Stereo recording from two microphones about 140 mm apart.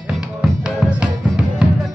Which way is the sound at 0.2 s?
5° right (ahead or behind).